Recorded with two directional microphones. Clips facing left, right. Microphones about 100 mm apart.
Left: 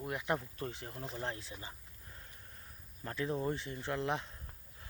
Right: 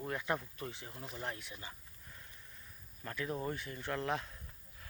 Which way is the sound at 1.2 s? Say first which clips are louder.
Even; 30° left (ahead or behind).